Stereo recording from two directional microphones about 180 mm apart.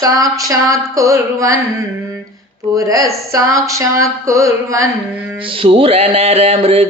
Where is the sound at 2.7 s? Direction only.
15° right (ahead or behind).